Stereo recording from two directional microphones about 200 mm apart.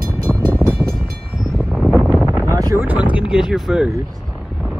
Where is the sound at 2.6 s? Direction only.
15° right (ahead or behind).